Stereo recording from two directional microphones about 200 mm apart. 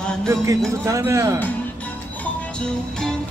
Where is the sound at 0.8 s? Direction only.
15° right (ahead or behind).